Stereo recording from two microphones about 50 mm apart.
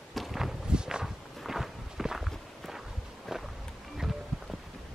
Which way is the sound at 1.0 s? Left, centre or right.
Centre.